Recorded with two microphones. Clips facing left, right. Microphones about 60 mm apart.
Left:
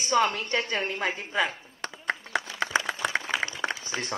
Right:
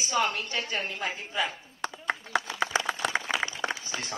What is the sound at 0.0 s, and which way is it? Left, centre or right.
A woman's voice, left.